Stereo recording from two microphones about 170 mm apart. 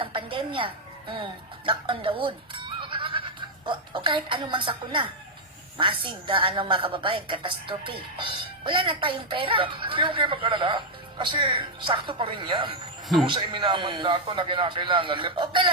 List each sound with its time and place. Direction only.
0.0 s music: 30° right (ahead or behind)
5.7 s a woman's voice: 30° right (ahead or behind)